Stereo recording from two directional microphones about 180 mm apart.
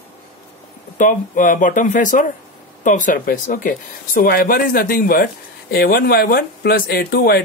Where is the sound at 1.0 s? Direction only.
45° left (ahead or behind).